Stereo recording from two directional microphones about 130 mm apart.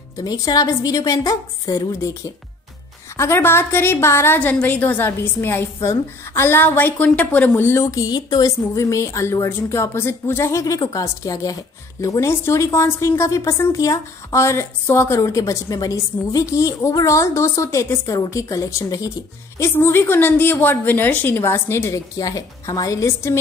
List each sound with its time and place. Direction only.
0.2 s a woman's voice: 30° left (ahead or behind)